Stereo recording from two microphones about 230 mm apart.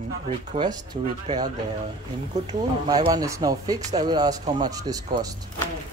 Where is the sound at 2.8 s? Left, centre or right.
Centre.